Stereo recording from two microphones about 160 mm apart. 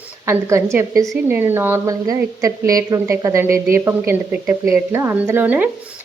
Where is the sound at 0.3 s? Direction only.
15° right (ahead or behind).